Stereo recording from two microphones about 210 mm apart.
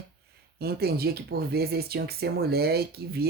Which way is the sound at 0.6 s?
50° right (ahead or behind).